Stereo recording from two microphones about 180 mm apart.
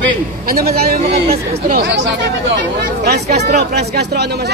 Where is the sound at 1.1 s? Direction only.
35° right (ahead or behind).